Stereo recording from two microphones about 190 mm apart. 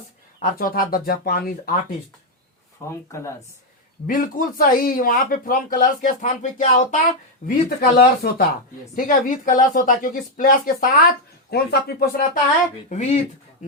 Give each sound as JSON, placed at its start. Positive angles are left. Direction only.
{"t": 0.4, "sound": "speech", "side_deg": 50}
{"t": 2.9, "sound": "speech", "side_deg": 15}
{"t": 4.0, "sound": "speech", "side_deg": 45}
{"t": 7.4, "sound": "speech", "side_deg": 55}
{"t": 12.9, "sound": "speech", "side_deg": 35}